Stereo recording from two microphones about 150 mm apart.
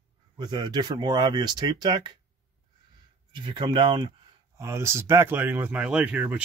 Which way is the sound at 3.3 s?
30° right (ahead or behind).